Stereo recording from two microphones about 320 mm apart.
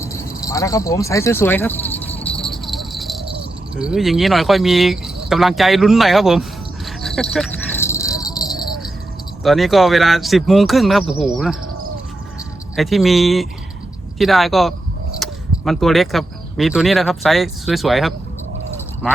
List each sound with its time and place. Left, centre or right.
0.0 s speech: centre
2.0 s rattle: centre
2.5 s music: centre
3.8 s speech: centre
6.8 s a sound: centre
9.4 s speech: centre
12.7 s speech: centre